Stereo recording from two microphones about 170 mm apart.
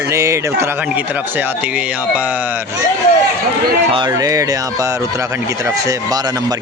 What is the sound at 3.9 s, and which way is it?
Speech, 25° right (ahead or behind).